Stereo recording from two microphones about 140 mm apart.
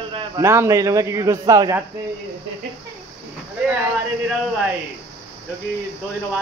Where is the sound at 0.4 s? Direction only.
20° right (ahead or behind).